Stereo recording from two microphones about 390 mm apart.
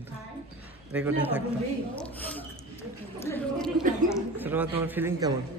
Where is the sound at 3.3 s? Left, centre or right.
Centre.